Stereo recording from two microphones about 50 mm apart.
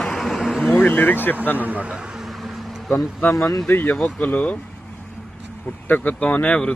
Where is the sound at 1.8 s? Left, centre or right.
Centre.